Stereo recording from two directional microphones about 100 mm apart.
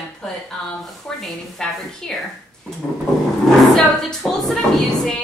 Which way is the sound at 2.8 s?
20° left (ahead or behind).